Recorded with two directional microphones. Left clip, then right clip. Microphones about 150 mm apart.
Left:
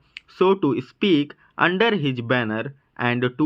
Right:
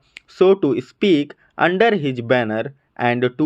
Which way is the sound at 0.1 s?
20° right (ahead or behind).